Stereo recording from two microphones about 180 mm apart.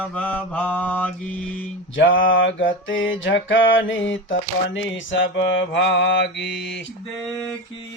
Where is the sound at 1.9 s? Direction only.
90° left; by 6.5 s 70° left (ahead or behind).